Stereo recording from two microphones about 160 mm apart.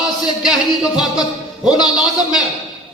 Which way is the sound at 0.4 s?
Centre (ahead or behind).